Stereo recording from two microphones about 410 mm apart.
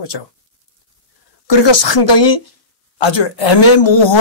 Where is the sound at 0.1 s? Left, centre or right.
Left.